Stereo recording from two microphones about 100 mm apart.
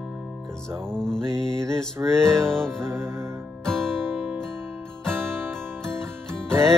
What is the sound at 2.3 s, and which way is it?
Music, 5° left (ahead or behind).